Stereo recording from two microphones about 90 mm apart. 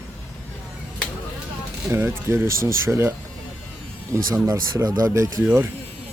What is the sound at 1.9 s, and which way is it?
Speech, 25° right (ahead or behind).